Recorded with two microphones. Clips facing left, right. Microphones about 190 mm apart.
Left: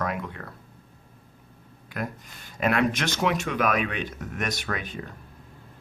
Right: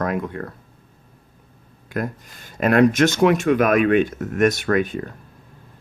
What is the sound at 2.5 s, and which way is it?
Speech, 45° right (ahead or behind).